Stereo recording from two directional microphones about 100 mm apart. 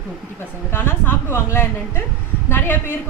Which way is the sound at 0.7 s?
20° left (ahead or behind).